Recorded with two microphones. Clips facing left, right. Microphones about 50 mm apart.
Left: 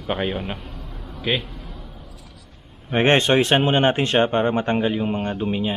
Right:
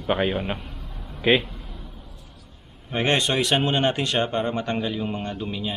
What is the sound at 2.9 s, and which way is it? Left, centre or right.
Speech, left.